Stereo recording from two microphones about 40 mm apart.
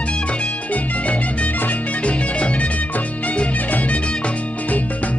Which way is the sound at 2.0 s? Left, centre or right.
Left.